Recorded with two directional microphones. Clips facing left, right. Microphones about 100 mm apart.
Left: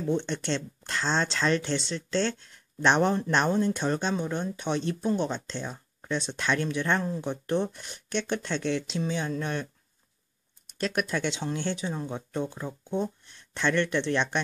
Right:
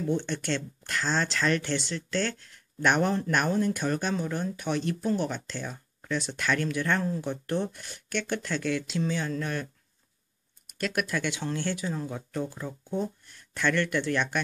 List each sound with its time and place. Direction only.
0.0 s speech: 20° left (ahead or behind)
10.7 s speech: 25° left (ahead or behind)